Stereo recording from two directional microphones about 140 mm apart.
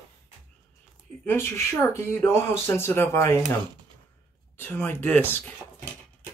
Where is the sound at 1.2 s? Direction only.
15° left (ahead or behind).